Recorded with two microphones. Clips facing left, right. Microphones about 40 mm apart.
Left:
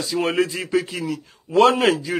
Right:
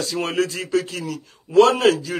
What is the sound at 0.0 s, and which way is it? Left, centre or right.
Speech, centre.